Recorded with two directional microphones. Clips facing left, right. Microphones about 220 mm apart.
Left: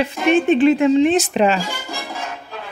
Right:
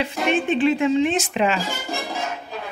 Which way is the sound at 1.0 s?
40° left (ahead or behind).